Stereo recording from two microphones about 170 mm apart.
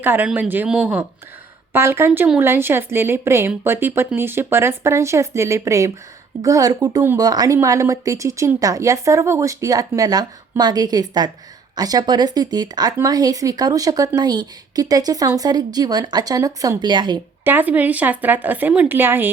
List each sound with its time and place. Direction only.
0.0 s speech: 10° right (ahead or behind)
17.4 s speech: 10° right (ahead or behind)